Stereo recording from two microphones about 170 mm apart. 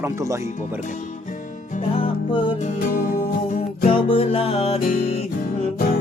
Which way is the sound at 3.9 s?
35° left (ahead or behind).